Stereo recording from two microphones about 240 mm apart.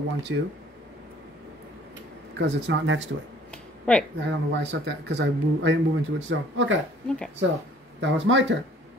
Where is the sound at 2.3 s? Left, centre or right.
Right.